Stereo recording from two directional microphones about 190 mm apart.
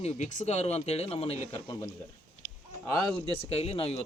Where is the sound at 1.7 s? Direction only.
15° left (ahead or behind).